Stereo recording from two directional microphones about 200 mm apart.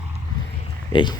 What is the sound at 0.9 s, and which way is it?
Speech, 25° left (ahead or behind).